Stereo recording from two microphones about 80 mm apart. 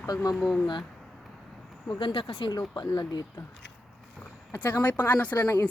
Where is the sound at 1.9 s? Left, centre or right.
Left.